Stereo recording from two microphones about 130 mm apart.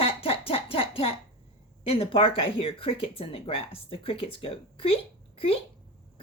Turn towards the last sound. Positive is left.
turn(degrees=45)  # may be behind; listen again after turning